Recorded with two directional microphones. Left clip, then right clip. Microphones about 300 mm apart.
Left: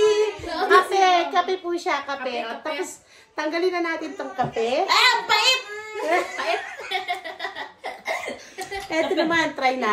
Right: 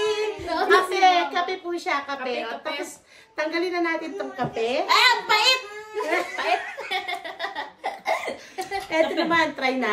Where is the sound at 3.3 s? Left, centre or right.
Centre.